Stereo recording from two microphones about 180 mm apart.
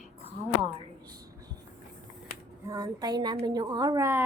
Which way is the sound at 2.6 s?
20° right (ahead or behind).